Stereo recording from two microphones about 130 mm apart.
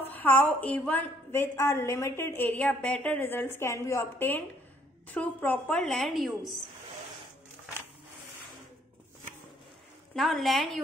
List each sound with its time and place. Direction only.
0.0 s a woman's voice: 15° left (ahead or behind)
10.1 s a woman's voice: centre (ahead or behind)